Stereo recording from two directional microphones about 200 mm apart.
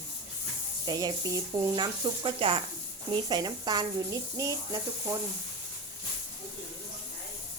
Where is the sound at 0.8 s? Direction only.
20° right (ahead or behind).